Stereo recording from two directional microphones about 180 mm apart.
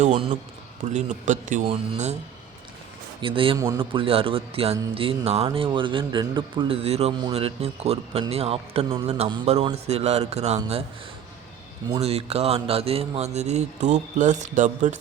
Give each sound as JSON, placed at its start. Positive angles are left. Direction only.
{"t": 0.0, "sound": "a man's voice", "side_deg": -40}
{"t": 3.2, "sound": "a man's voice", "side_deg": -30}
{"t": 11.9, "sound": "a man's voice", "side_deg": -35}